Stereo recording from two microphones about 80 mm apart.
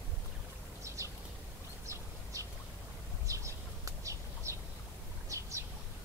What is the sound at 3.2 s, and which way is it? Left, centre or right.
Bird, right.